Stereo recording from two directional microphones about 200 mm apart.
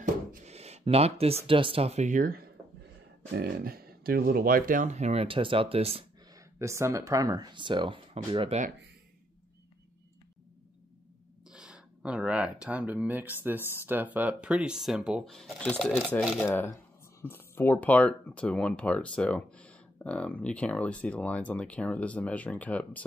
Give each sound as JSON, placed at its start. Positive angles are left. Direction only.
{"t": 0.0, "sound": "speech", "side_deg": -35}
{"t": 6.3, "sound": "speech", "side_deg": -15}
{"t": 11.4, "sound": "speech", "side_deg": -5}